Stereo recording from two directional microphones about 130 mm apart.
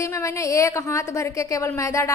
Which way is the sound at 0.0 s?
25° left (ahead or behind).